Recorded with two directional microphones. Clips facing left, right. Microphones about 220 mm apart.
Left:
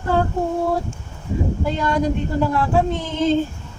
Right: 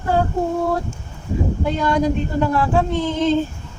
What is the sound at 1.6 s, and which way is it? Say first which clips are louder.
Speech: right 3 dB; 5° left (ahead or behind).